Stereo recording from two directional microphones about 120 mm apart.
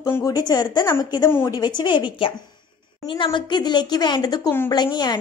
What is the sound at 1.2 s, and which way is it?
Speech, 20° left (ahead or behind).